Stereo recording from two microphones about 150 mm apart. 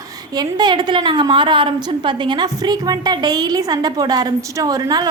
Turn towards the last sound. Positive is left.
turn(degrees=-25)  # may be behind; listen again after turning